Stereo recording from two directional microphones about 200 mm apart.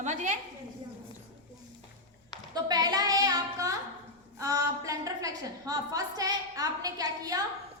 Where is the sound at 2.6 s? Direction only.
20° right (ahead or behind).